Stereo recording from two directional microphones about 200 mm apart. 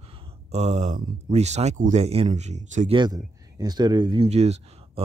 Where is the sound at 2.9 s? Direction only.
20° right (ahead or behind).